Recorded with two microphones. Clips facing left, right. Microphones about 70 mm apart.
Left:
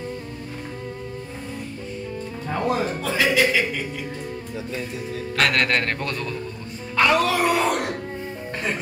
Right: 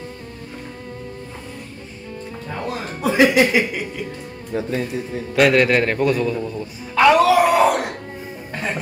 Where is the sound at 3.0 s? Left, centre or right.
Centre.